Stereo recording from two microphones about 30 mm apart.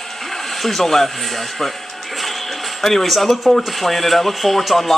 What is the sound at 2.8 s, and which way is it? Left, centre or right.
Speech, centre.